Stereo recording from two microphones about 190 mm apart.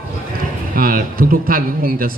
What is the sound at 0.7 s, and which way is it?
A man's voice, 50° right (ahead or behind).